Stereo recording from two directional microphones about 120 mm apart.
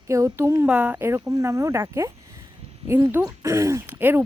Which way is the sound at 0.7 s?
10° right (ahead or behind).